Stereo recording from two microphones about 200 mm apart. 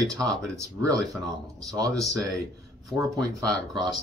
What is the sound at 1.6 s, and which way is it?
Speech, 15° right (ahead or behind).